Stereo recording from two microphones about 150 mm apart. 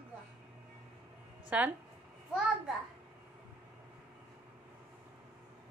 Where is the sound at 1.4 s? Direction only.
10° right (ahead or behind).